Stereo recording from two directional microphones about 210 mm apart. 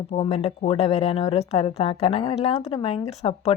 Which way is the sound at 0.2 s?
30° left (ahead or behind).